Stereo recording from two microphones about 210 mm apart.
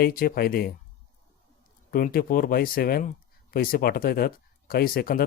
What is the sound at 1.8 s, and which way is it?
A man's voice, 45° left (ahead or behind).